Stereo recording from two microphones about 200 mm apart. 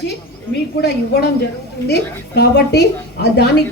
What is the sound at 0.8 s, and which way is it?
A woman's voice, 55° left (ahead or behind).